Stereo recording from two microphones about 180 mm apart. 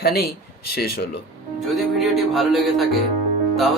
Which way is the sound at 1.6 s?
Centre (ahead or behind).